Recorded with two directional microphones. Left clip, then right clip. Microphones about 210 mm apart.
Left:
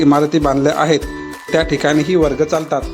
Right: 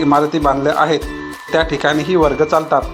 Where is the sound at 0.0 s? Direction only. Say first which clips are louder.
Even; 45° left (ahead or behind).